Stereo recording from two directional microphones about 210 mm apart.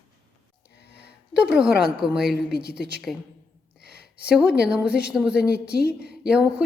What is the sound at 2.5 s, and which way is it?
Speech, 50° left (ahead or behind).